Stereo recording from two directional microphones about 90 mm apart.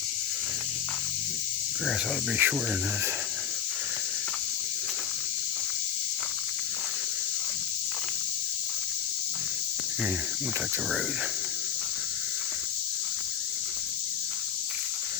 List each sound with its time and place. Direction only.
2.4 s speech: 25° right (ahead or behind)